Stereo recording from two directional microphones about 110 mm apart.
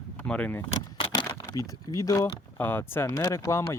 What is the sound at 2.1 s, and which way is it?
Speech, 20° left (ahead or behind).